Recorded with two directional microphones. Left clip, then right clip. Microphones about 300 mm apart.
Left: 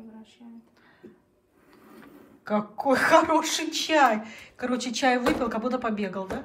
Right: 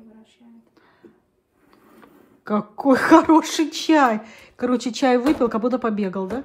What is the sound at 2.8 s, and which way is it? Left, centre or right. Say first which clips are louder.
Speech: right 5 dB; right.